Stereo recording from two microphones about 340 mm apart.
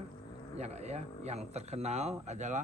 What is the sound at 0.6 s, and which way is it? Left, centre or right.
Speech, centre.